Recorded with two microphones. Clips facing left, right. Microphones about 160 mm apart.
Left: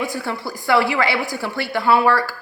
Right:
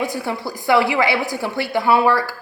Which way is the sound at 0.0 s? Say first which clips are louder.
Right 2 dB; 20° right (ahead or behind).